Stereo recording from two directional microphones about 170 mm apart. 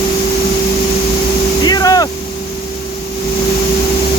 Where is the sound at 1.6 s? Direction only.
25° left (ahead or behind).